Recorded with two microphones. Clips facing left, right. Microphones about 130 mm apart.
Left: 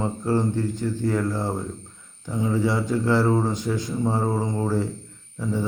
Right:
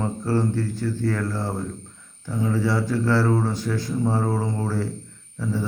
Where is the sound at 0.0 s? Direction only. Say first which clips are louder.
Even; 20° left (ahead or behind).